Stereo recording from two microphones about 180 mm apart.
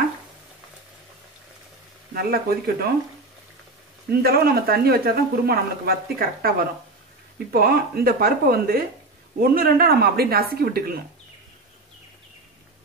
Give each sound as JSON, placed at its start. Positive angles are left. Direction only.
{"t": 2.1, "sound": "speech", "side_deg": -60}
{"t": 4.1, "sound": "speech", "side_deg": -60}
{"t": 7.5, "sound": "speech", "side_deg": -55}